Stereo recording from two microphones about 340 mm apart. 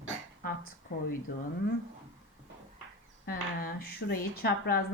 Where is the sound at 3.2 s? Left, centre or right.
Left.